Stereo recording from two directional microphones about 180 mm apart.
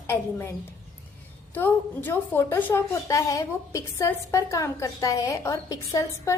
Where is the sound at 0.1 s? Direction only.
10° left (ahead or behind).